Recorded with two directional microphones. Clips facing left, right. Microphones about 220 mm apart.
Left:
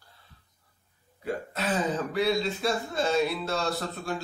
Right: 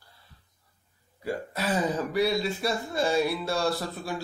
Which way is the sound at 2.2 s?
5° right (ahead or behind).